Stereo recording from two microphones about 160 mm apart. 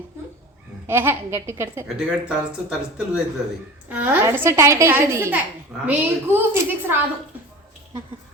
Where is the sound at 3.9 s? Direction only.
10° right (ahead or behind).